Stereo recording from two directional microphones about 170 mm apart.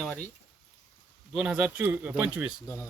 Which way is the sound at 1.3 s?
5° right (ahead or behind).